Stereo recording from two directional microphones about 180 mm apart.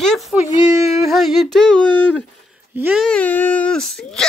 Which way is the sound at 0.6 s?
20° right (ahead or behind).